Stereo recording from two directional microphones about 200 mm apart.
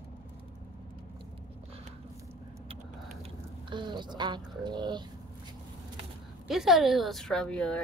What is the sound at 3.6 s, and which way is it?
Speech, 25° right (ahead or behind).